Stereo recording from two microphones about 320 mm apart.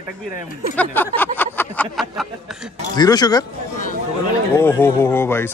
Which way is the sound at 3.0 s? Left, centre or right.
Centre.